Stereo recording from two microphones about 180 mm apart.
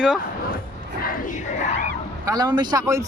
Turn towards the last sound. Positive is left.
turn(degrees=-20)  # may be behind; listen again after turning